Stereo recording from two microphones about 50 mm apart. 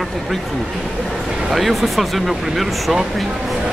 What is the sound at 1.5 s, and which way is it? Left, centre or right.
Speech, centre.